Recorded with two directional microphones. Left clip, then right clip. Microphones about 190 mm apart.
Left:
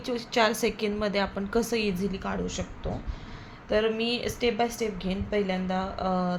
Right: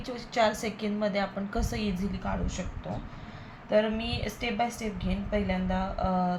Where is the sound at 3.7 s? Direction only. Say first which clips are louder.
Left 1 dB; 50° left (ahead or behind).